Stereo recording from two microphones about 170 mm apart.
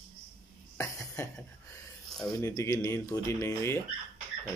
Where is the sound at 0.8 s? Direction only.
15° left (ahead or behind).